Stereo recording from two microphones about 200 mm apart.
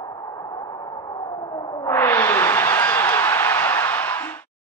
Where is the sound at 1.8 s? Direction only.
10° left (ahead or behind).